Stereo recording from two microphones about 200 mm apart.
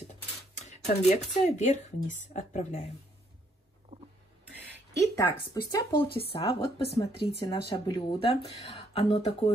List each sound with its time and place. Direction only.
0.6 s speech: 35° left (ahead or behind)
3.9 s a sound: 25° right (ahead or behind)
5.1 s speech: 15° left (ahead or behind)